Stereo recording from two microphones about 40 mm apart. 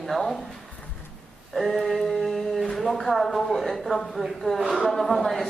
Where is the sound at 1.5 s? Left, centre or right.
Centre.